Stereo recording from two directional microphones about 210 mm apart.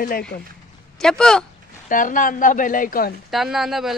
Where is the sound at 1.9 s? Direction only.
40° left (ahead or behind).